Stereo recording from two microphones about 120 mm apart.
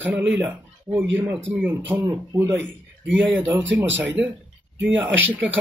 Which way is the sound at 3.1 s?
15° right (ahead or behind).